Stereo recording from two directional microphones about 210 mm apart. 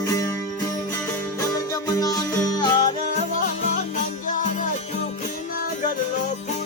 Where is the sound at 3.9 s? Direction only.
35° left (ahead or behind).